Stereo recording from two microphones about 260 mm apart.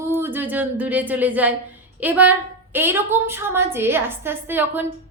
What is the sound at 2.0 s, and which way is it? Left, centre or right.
A woman's voice, centre.